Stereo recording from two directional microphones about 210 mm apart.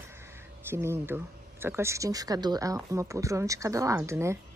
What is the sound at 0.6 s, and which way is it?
Speech, 10° right (ahead or behind).